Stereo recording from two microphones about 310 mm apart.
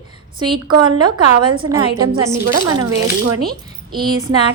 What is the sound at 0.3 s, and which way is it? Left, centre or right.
A woman's voice, centre.